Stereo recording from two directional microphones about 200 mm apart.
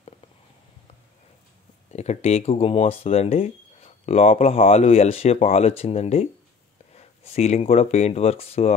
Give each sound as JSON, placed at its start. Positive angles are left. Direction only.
{"t": 1.9, "sound": "speech", "side_deg": 35}